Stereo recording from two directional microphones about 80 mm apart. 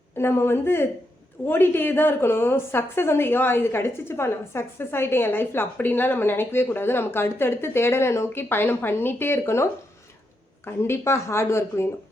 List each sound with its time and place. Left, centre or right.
0.2 s a woman's voice: left
10.7 s speech: left